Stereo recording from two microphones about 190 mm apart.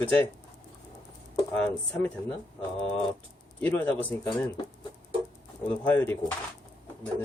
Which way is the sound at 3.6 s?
10° left (ahead or behind).